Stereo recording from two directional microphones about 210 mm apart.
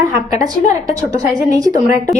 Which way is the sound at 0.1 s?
15° right (ahead or behind).